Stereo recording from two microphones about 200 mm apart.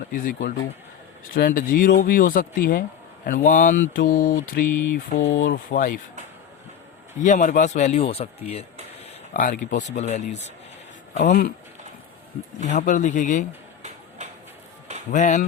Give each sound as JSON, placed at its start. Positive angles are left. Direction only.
{"t": 0.1, "sound": "speech", "side_deg": 40}
{"t": 7.2, "sound": "speech", "side_deg": 40}
{"t": 12.6, "sound": "speech", "side_deg": 40}
{"t": 15.1, "sound": "speech", "side_deg": 35}